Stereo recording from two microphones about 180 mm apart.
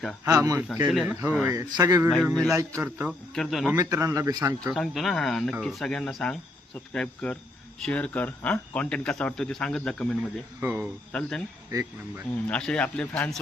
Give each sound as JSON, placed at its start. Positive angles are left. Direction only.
{"t": 0.3, "sound": "speech", "side_deg": -20}
{"t": 0.9, "sound": "speech", "side_deg": -5}
{"t": 1.7, "sound": "speech", "side_deg": -20}
{"t": 2.3, "sound": "speech", "side_deg": 5}
{"t": 2.6, "sound": "speech", "side_deg": -15}
{"t": 3.3, "sound": "speech", "side_deg": 0}
{"t": 3.8, "sound": "speech", "side_deg": -15}
{"t": 4.7, "sound": "speech", "side_deg": 0}
{"t": 10.6, "sound": "speech", "side_deg": -10}
{"t": 11.1, "sound": "speech", "side_deg": 5}
{"t": 11.7, "sound": "speech", "side_deg": -20}
{"t": 12.5, "sound": "speech", "side_deg": 5}